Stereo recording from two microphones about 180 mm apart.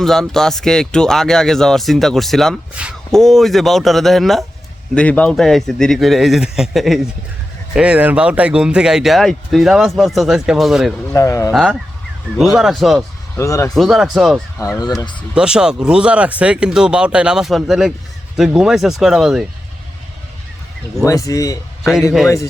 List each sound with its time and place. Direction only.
0.0 s a man's voice: centre (ahead or behind)
11.1 s a man's voice: 15° left (ahead or behind)
11.5 s speech: centre (ahead or behind)
13.3 s a man's voice: 15° left (ahead or behind)
13.7 s speech: centre (ahead or behind)
14.8 s speech: 20° left (ahead or behind)
15.4 s speech: 5° right (ahead or behind)
21.0 s a man's voice: 20° left (ahead or behind)